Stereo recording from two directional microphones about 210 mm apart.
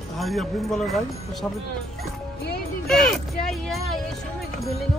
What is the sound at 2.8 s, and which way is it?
Speech, centre (ahead or behind).